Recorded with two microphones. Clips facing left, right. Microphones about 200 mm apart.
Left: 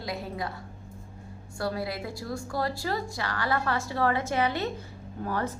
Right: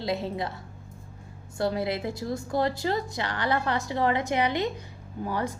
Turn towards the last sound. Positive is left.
turn(degrees=-15)  # may be behind; listen again after turning